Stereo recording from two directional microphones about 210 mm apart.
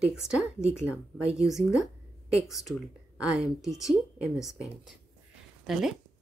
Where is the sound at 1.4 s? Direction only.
Centre (ahead or behind).